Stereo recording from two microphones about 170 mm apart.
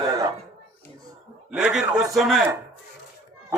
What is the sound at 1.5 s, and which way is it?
Speech, 5° right (ahead or behind).